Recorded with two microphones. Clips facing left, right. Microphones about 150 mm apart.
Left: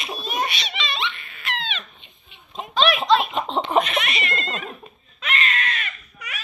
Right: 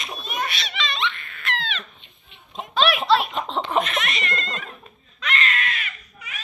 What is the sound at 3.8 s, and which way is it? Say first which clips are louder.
Giggle: left 1 dB; 5° left (ahead or behind).